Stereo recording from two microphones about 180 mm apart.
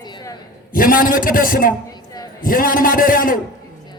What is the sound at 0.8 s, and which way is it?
Speech, 50° left (ahead or behind).